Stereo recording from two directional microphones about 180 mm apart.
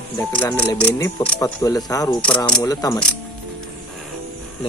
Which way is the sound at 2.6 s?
20° left (ahead or behind).